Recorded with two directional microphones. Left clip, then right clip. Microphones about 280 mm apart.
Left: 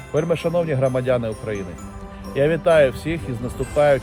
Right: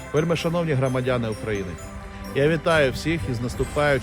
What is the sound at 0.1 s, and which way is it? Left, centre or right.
Speech, centre.